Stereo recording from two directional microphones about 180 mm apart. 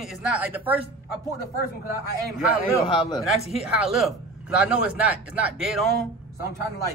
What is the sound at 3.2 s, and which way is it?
A man's voice, centre (ahead or behind).